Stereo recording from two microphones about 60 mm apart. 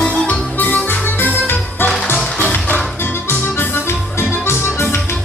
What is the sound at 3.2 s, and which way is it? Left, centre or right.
Music, left.